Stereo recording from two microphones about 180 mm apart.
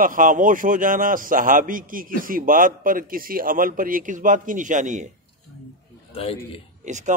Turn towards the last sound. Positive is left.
turn(degrees=-40)  # may be behind; listen again after turning